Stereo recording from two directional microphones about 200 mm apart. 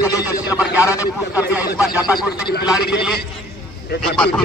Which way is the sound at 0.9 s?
10° right (ahead or behind).